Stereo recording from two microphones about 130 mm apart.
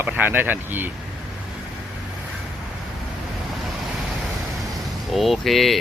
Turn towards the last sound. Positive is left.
turn(degrees=0)  # may be behind; listen again after turning